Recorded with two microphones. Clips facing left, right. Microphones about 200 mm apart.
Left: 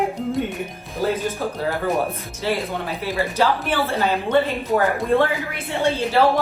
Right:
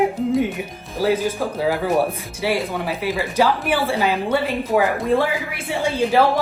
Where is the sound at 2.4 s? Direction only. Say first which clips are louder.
Right 2 dB; 10° right (ahead or behind).